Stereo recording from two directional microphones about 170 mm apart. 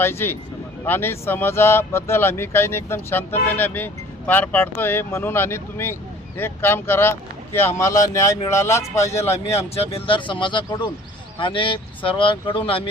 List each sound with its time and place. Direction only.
0.0 s speech: 15° left (ahead or behind)
9.5 s speech: 35° left (ahead or behind)